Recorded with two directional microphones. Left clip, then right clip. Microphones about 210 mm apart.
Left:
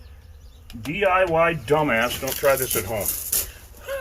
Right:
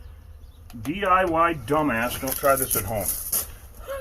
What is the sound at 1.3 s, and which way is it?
Speech, 5° left (ahead or behind).